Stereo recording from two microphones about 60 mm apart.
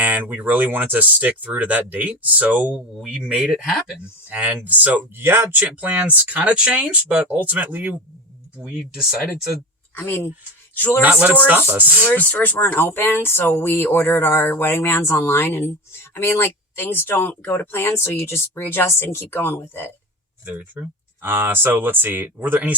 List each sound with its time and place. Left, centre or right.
0.0 s speech: right; by 3.9 s centre
4.3 s speech: right
5.1 s speech: right
5.5 s speech: right
8.5 s speech: centre
9.9 s speech: left
10.8 s a sound: left
11.7 s speech: right
12.0 s speech: left
20.4 s speech: right